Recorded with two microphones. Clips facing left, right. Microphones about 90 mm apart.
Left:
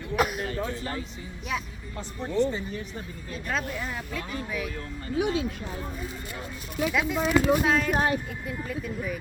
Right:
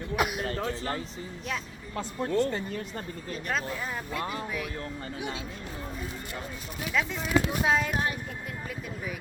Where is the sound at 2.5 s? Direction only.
55° right (ahead or behind).